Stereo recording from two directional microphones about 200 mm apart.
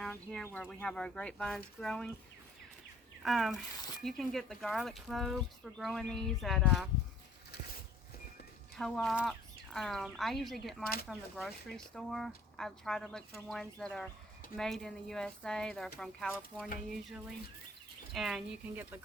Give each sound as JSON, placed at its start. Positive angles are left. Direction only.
{"t": 0.0, "sound": "speech", "side_deg": 5}
{"t": 3.2, "sound": "speech", "side_deg": 0}
{"t": 8.7, "sound": "speech", "side_deg": 0}